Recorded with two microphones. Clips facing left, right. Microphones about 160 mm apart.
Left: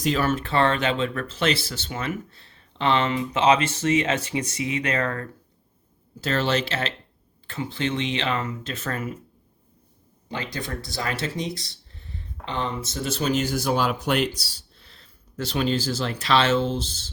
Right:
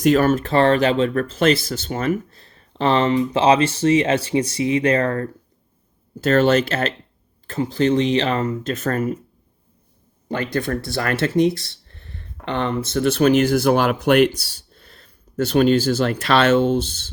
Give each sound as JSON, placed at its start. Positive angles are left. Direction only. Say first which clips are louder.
{"t": 0.0, "sound": "speech", "louder": "right 8 dB", "side_deg": -50}
{"t": 6.1, "sound": "speech", "louder": "right 8 dB", "side_deg": -50}
{"t": 10.2, "sound": "speech", "louder": "right 9 dB", "side_deg": -55}